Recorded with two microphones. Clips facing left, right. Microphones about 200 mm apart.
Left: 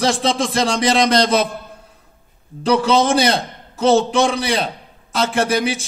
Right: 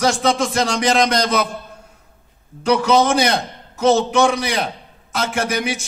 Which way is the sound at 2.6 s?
30° left (ahead or behind).